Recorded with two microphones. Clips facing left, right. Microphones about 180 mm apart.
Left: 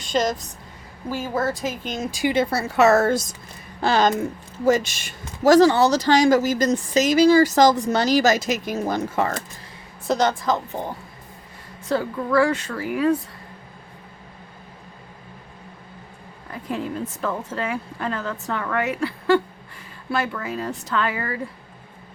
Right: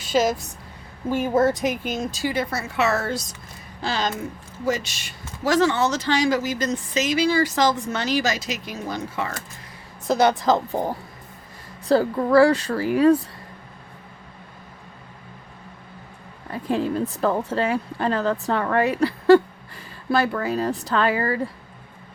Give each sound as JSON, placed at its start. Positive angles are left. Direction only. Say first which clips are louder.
{"t": 0.0, "sound": "a woman's voice", "louder": "right 2 dB", "side_deg": -5}
{"t": 1.0, "sound": "a woman's voice", "louder": "right 5 dB", "side_deg": -20}
{"t": 2.0, "sound": "speech", "louder": "left 8 dB", "side_deg": 15}
{"t": 2.3, "sound": "speech", "louder": "left 4 dB", "side_deg": 30}
{"t": 10.1, "sound": "a woman's voice", "louder": "right 2 dB", "side_deg": -10}
{"t": 10.4, "sound": "a woman's voice", "louder": "right 4 dB", "side_deg": -30}
{"t": 16.5, "sound": "a woman's voice", "louder": "right 5 dB", "side_deg": -30}